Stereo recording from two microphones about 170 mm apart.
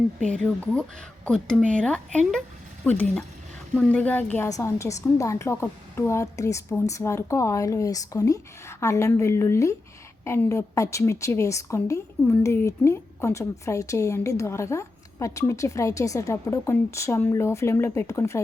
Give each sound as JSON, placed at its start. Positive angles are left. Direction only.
{"t": 0.3, "sound": "a woman's voice", "side_deg": 5}